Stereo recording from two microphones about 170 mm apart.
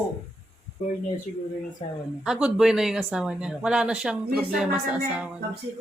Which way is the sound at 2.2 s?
5° right (ahead or behind).